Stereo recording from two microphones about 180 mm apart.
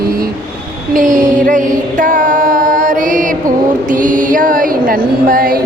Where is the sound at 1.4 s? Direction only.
45° right (ahead or behind).